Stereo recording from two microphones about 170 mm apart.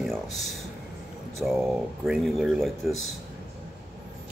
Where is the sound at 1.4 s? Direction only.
Centre (ahead or behind).